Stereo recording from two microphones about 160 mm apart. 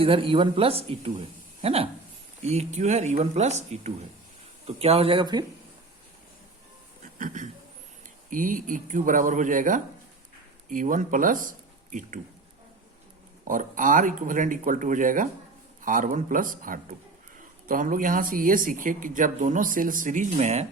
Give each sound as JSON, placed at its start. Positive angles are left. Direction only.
{"t": 0.0, "sound": "speech", "side_deg": -35}
{"t": 7.2, "sound": "speech", "side_deg": -50}
{"t": 13.4, "sound": "speech", "side_deg": -55}